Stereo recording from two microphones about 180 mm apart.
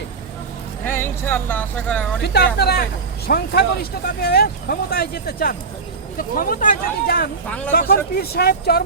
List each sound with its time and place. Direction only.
0.9 s speech: 10° left (ahead or behind)
2.2 s speech: 65° left (ahead or behind)